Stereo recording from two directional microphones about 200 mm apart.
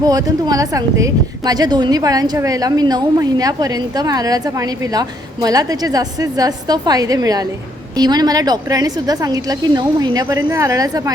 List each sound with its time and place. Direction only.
0.0 s speech: 20° right (ahead or behind)